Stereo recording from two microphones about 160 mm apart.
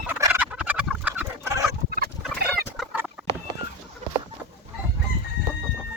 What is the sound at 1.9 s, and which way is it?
Fowl, 70° right (ahead or behind).